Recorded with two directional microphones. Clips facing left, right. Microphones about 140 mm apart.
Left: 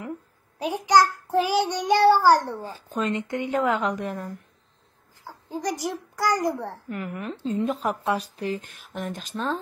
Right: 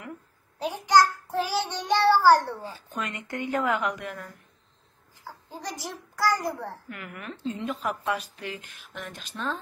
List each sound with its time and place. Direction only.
0.6 s child singing: 15° left (ahead or behind)
2.6 s a woman's voice: 35° left (ahead or behind)
5.5 s child singing: 15° left (ahead or behind)
6.9 s a woman's voice: 30° left (ahead or behind)